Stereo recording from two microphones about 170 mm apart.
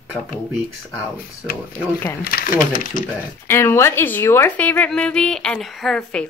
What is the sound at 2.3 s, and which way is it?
Speech, 60° left (ahead or behind).